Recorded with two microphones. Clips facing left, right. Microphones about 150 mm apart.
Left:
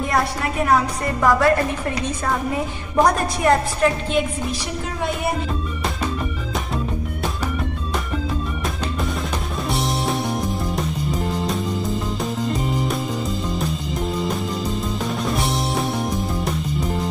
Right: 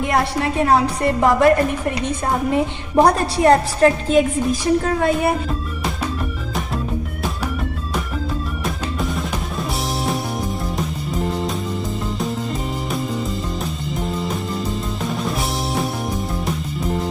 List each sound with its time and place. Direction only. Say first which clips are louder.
0.0 s a woman's voice: right 2 dB; 25° right (ahead or behind)
15.0 s music: even; centre (ahead or behind)